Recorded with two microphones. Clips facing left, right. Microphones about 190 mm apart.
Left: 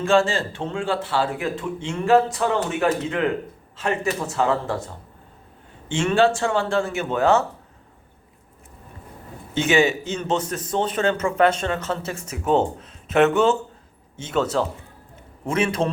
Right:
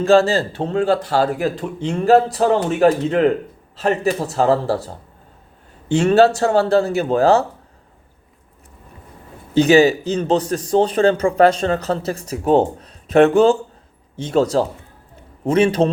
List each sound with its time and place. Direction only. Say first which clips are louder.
0.0 s speech: right 5 dB; 35° right (ahead or behind)
9.6 s speech: right 7 dB; 35° right (ahead or behind)